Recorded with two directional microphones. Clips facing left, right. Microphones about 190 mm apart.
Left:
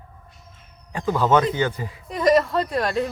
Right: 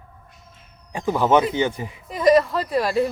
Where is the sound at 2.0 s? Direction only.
Centre (ahead or behind).